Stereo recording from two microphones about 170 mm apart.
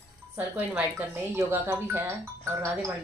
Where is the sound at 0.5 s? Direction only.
10° right (ahead or behind).